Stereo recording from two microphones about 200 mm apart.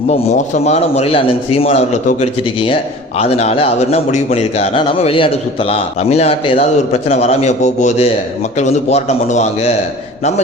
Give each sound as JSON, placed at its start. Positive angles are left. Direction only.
{"t": 0.1, "sound": "a man's voice", "side_deg": 35}